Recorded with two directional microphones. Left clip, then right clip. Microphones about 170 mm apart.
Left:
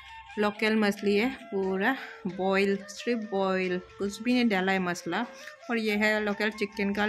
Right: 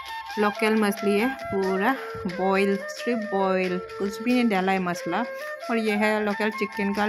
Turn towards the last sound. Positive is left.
turn(degrees=-10)  # may be behind; listen again after turning